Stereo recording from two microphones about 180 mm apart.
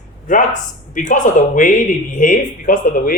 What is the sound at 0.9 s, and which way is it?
Speech, 45° left (ahead or behind).